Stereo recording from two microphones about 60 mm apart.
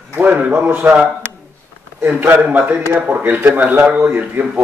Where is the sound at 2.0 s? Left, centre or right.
Right.